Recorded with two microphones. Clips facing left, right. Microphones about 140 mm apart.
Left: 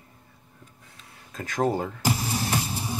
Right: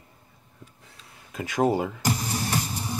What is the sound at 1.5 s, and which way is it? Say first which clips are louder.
Speech: right 2 dB; 10° right (ahead or behind).